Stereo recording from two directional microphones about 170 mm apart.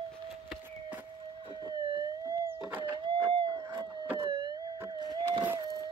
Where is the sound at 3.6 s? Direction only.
15° right (ahead or behind).